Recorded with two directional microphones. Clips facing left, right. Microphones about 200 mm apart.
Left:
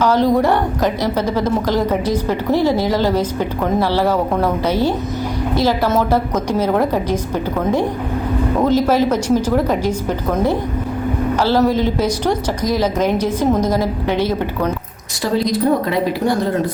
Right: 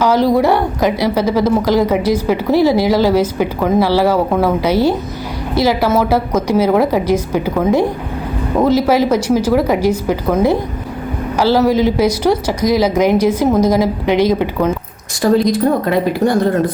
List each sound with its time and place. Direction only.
0.0 s a woman's voice: 10° right (ahead or behind)
15.2 s speech: 50° right (ahead or behind)